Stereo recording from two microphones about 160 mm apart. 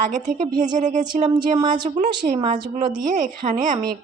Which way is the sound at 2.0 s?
50° right (ahead or behind).